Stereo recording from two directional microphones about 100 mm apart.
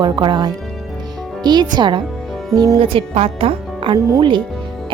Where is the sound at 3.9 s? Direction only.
45° right (ahead or behind).